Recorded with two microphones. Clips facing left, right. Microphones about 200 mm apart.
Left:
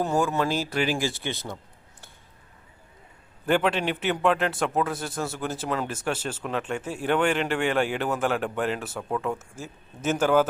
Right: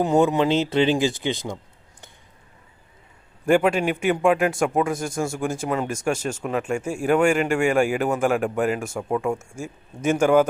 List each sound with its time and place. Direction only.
0.0 s speech: 20° right (ahead or behind)
3.4 s speech: 10° right (ahead or behind)